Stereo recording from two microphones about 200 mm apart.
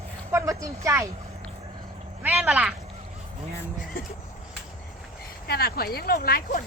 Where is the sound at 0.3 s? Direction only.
15° right (ahead or behind).